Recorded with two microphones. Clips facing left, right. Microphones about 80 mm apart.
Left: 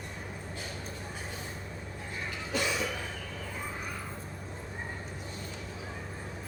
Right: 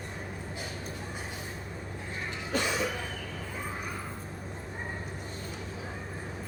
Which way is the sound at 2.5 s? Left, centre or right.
Right.